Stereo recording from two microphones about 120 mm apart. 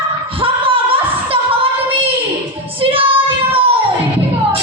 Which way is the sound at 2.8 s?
50° right (ahead or behind).